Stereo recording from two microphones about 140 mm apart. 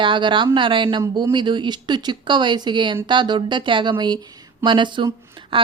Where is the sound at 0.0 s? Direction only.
35° right (ahead or behind).